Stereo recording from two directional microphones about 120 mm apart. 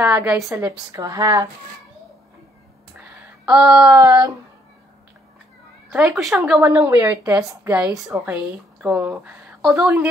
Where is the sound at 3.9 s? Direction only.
30° right (ahead or behind).